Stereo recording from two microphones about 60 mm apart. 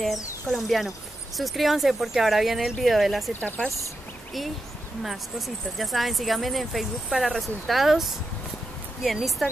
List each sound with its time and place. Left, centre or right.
0.5 s speech: centre
3.3 s speech: left
5.8 s speech: centre